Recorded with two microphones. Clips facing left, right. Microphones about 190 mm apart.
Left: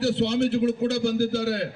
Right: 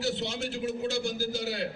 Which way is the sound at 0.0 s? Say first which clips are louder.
Left 10 dB; 60° left (ahead or behind).